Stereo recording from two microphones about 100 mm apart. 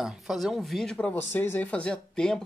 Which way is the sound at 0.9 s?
15° left (ahead or behind).